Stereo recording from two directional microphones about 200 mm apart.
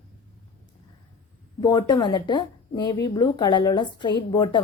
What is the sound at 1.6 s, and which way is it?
Speech, 20° left (ahead or behind).